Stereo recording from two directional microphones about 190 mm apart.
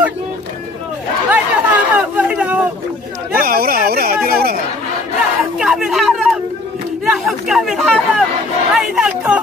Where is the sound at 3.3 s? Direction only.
50° right (ahead or behind).